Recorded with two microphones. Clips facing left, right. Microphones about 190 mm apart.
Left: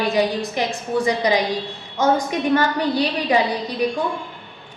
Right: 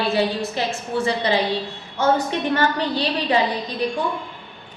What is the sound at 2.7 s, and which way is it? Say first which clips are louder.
A woman's voice: left 2 dB; 10° left (ahead or behind).